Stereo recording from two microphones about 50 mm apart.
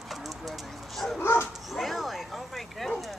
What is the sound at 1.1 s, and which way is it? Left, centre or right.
Speech, left.